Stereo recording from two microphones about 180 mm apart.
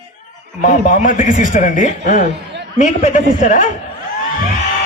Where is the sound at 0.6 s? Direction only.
40° left (ahead or behind).